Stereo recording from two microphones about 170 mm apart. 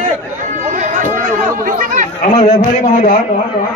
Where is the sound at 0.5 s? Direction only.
45° right (ahead or behind).